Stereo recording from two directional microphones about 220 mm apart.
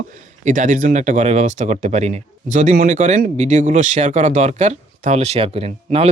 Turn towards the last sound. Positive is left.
turn(degrees=-25)  # may be behind; listen again after turning